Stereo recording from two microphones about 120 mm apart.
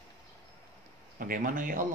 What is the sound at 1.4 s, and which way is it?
Speech, 90° right.